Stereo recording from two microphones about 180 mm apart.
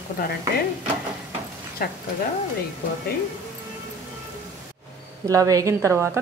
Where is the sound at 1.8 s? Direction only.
55° left (ahead or behind).